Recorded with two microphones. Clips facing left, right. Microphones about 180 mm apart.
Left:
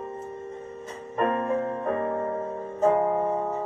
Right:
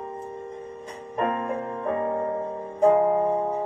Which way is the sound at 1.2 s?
20° right (ahead or behind).